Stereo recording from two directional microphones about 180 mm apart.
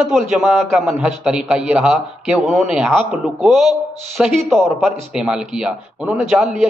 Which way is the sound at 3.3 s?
Centre (ahead or behind).